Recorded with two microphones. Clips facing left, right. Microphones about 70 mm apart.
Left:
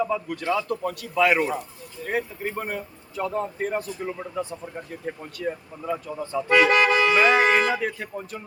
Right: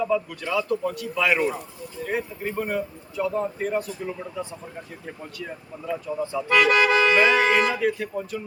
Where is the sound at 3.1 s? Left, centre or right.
Left.